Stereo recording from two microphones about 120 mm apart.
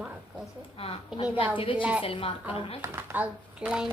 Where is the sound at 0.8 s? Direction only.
50° left (ahead or behind).